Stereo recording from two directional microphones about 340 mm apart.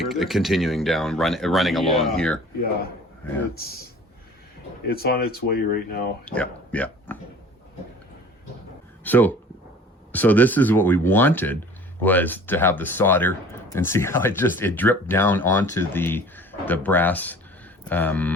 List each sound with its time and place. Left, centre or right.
0.0 s speech: centre
4.9 s speech: left
6.2 s speech: centre
9.0 s speech: centre